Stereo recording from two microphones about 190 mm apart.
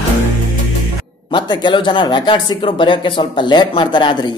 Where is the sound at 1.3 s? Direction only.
25° left (ahead or behind).